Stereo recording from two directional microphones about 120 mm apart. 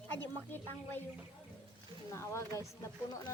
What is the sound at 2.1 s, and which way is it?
Speech, 25° left (ahead or behind).